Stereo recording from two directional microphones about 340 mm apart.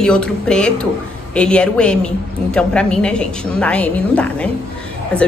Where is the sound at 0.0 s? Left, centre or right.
Centre.